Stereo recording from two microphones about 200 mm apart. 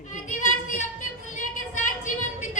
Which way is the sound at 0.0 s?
40° left (ahead or behind).